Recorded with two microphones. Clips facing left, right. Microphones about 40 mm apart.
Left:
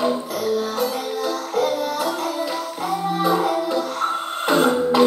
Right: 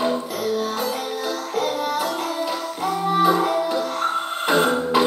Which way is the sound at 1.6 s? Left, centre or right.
Centre.